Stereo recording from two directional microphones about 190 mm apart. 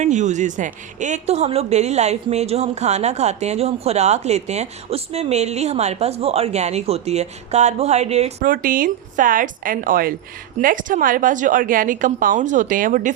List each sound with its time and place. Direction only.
0.0 s a woman's voice: 40° right (ahead or behind)
8.4 s a woman's voice: 45° right (ahead or behind)